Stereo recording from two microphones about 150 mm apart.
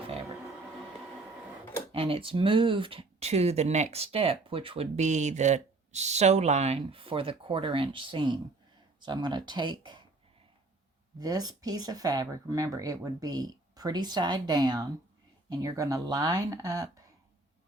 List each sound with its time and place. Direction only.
1.9 s speech: 40° right (ahead or behind)
4.9 s speech: 50° right (ahead or behind); by 10.0 s 30° right (ahead or behind)
11.2 s speech: 25° right (ahead or behind)